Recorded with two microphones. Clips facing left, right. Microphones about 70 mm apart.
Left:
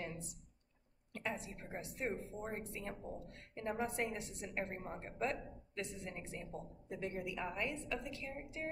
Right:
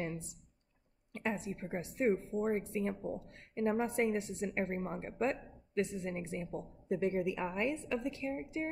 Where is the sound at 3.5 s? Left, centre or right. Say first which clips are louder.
Right 7 dB; right.